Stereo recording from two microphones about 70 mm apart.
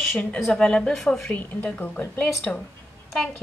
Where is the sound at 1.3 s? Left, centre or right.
Left.